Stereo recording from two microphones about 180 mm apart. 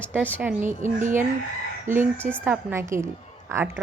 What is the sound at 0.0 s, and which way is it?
Speech, 10° right (ahead or behind).